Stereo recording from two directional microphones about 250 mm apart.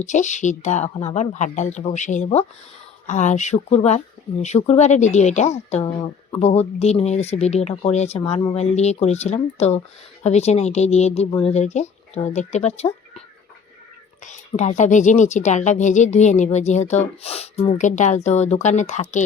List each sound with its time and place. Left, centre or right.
0.0 s speech: left
14.3 s speech: left